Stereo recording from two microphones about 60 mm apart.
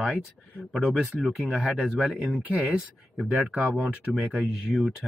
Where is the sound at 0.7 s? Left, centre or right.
Centre.